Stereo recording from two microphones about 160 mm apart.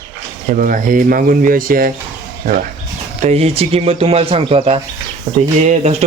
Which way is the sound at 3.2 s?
40° right (ahead or behind).